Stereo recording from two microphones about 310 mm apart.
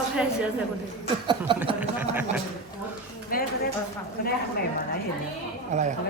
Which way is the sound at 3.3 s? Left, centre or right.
Left.